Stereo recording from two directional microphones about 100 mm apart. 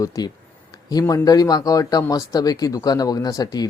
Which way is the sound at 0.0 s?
35° left (ahead or behind).